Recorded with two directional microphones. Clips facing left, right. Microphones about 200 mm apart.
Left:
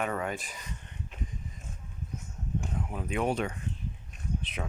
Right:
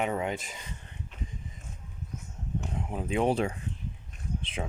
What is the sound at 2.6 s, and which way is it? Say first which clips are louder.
Speech: right 2 dB; 25° right (ahead or behind).